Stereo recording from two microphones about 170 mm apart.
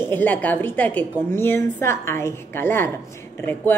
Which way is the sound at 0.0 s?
10° left (ahead or behind).